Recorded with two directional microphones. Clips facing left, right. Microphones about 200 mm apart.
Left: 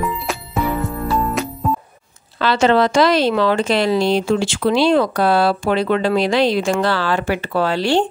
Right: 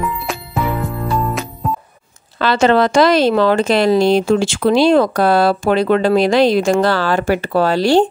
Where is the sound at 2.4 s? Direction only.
50° right (ahead or behind).